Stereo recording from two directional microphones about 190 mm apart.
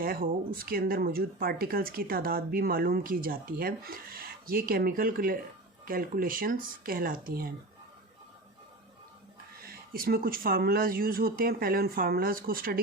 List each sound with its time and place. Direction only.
0.0 s speech: 50° right (ahead or behind)
9.6 s speech: 50° right (ahead or behind)